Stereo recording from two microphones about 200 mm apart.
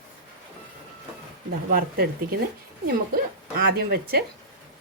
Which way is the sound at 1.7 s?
50° right (ahead or behind).